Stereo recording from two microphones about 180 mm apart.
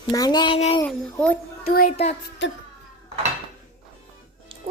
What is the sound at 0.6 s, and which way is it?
Speech, 35° left (ahead or behind).